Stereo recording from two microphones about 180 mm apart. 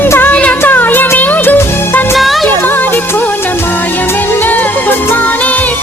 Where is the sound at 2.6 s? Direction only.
10° left (ahead or behind).